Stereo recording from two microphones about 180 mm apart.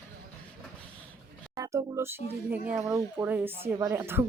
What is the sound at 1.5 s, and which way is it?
Speech, 20° right (ahead or behind).